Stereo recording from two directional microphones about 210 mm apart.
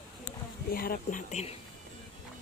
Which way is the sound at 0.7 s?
45° left (ahead or behind).